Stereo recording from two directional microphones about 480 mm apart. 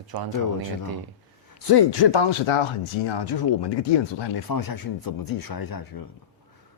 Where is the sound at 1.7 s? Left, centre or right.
Left.